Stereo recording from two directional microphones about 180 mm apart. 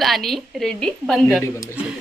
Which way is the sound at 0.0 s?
Centre (ahead or behind).